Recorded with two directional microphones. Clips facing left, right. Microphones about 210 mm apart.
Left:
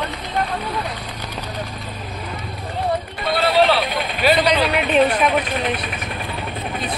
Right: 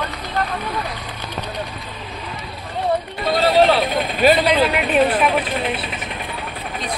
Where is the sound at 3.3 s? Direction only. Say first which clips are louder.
Right 2 dB; 45° right (ahead or behind).